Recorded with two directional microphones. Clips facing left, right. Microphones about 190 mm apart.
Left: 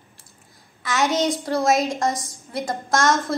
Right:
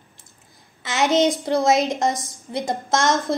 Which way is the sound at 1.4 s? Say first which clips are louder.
Right 2 dB; 20° right (ahead or behind).